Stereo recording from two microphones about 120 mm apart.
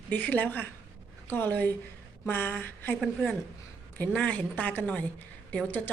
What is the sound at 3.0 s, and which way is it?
A woman's voice, centre (ahead or behind).